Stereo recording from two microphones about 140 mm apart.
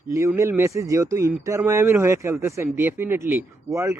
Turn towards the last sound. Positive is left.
turn(degrees=-20)  # may be behind; listen again after turning